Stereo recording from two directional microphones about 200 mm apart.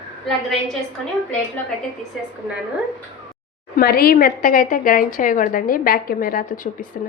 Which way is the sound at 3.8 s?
50° left (ahead or behind).